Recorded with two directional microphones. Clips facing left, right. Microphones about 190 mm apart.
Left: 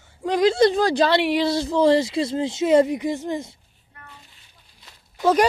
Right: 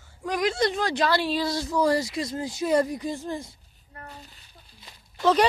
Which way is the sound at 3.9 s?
40° right (ahead or behind).